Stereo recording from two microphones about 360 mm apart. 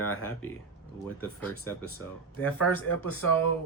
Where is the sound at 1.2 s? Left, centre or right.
Centre.